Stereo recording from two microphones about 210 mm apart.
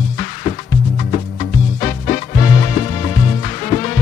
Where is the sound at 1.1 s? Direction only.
35° left (ahead or behind).